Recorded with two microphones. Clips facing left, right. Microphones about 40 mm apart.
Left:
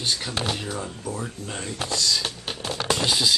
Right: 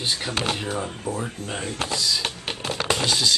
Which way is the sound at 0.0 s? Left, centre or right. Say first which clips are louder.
Right 1 dB; centre.